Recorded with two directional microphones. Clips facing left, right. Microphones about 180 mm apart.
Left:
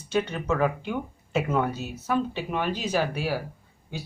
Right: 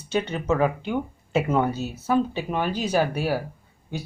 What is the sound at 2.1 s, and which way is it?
Speech, 40° right (ahead or behind).